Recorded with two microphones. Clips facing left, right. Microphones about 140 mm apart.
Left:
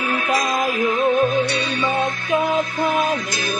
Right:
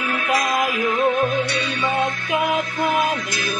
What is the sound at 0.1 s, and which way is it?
Music, 30° left (ahead or behind).